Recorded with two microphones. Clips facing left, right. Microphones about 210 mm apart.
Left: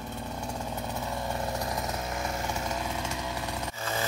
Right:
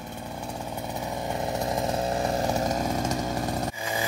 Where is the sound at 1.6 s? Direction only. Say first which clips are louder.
Right 7 dB; 35° right (ahead or behind).